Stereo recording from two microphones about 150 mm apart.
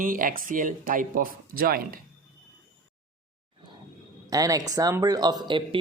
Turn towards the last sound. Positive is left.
turn(degrees=-35)  # may be behind; listen again after turning